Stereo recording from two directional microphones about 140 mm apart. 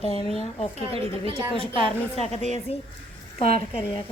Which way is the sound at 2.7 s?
50° left (ahead or behind).